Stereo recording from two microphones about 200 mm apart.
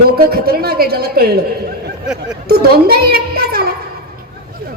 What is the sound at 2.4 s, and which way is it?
A child's voice, 50° right (ahead or behind).